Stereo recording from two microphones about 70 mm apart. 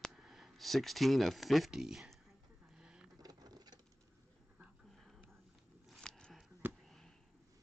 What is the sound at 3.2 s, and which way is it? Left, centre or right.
Patter, right.